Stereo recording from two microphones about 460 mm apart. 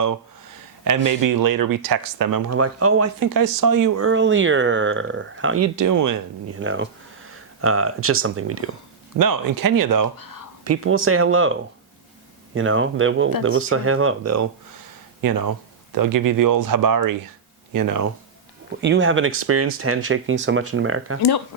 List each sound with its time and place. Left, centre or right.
0.9 s speech: right
2.5 s speech: right
3.2 s speech: right
4.0 s speech: right
6.6 s speech: right
9.1 s speech: right
10.6 s speech: right
12.5 s speech: right
15.2 s speech: right
18.8 s speech: right
21.2 s speech: left